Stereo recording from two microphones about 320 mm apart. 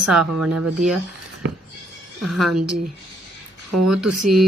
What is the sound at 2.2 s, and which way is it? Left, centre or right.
Speech, centre.